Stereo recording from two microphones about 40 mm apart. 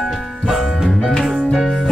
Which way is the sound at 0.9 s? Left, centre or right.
Centre.